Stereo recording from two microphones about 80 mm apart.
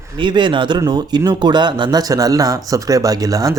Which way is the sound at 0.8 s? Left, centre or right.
Right.